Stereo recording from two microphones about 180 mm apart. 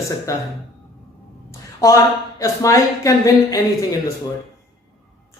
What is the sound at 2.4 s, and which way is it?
Speech, 15° left (ahead or behind).